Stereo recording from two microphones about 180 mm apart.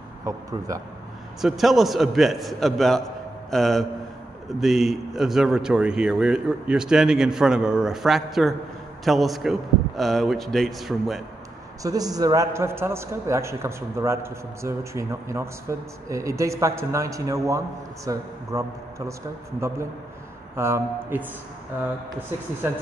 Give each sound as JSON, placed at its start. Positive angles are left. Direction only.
{"t": 0.2, "sound": "a man's voice", "side_deg": -20}
{"t": 1.4, "sound": "a man's voice", "side_deg": 0}
{"t": 11.8, "sound": "a man's voice", "side_deg": -20}
{"t": 20.5, "sound": "a man's voice", "side_deg": -15}